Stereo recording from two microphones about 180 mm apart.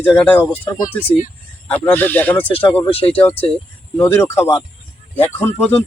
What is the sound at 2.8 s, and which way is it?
Speech, 30° left (ahead or behind).